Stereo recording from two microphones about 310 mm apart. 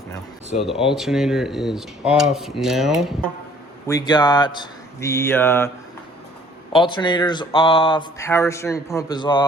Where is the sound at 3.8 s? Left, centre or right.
Centre.